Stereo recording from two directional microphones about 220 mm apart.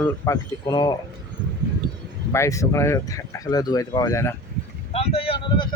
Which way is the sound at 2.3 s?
15° left (ahead or behind).